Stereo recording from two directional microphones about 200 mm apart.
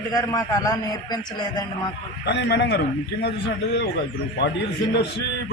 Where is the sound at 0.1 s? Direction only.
20° left (ahead or behind).